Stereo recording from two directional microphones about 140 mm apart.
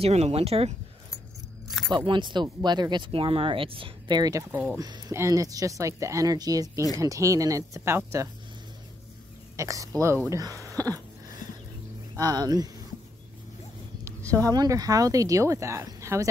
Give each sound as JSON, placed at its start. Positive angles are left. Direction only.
{"t": 0.0, "sound": "speech", "side_deg": -50}
{"t": 1.7, "sound": "keys jangling", "side_deg": 0}
{"t": 2.0, "sound": "speech", "side_deg": -35}
{"t": 4.2, "sound": "speech", "side_deg": -20}
{"t": 9.6, "sound": "speech", "side_deg": -25}
{"t": 12.2, "sound": "speech", "side_deg": -30}
{"t": 14.3, "sound": "speech", "side_deg": -25}